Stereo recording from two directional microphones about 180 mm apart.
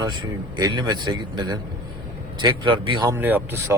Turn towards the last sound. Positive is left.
turn(degrees=-10)  # may be behind; listen again after turning